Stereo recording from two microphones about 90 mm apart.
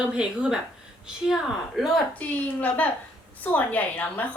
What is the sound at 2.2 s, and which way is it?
A woman's voice, 15° left (ahead or behind).